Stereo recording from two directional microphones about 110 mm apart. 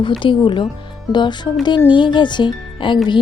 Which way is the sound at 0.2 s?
50° left (ahead or behind).